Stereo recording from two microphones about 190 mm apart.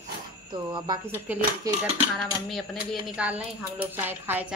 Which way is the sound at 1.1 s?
10° right (ahead or behind).